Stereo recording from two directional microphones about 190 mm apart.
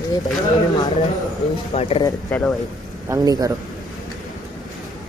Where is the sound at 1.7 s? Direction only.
30° left (ahead or behind).